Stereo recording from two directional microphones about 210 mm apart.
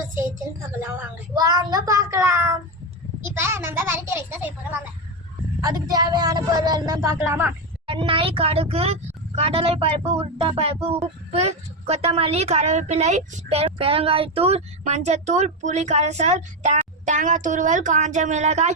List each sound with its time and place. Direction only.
0.8 s a child's voice: 10° right (ahead or behind)
5.6 s speech: 15° right (ahead or behind)
7.9 s a woman's voice: 25° right (ahead or behind)